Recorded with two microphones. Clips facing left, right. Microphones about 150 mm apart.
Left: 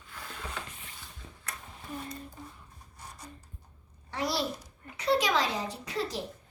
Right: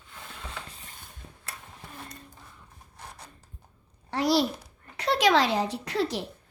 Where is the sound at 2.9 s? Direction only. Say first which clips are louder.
Right 1 dB; 65° right (ahead or behind).